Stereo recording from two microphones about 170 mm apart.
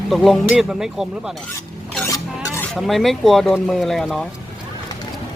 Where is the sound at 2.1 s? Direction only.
15° left (ahead or behind).